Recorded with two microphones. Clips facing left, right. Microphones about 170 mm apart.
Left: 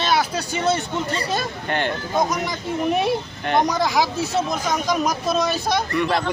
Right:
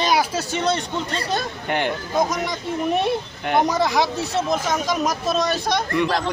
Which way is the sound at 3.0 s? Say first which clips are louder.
Even; 5° right (ahead or behind).